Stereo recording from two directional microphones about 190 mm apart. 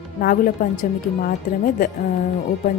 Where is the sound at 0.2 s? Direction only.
50° left (ahead or behind).